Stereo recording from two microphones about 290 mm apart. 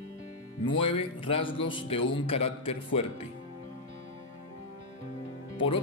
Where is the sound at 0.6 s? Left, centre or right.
Centre.